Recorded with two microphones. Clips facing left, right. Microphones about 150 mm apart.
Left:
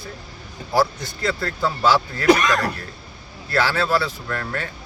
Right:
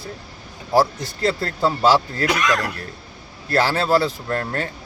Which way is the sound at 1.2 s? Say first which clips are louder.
Right 3 dB; 35° right (ahead or behind).